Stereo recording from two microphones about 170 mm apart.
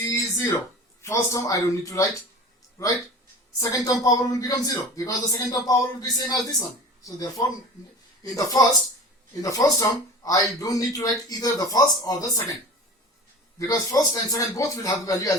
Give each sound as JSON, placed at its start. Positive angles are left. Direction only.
{"t": 0.1, "sound": "a sound", "side_deg": 20}
{"t": 1.0, "sound": "a man's voice", "side_deg": 15}
{"t": 13.6, "sound": "a man's voice", "side_deg": 20}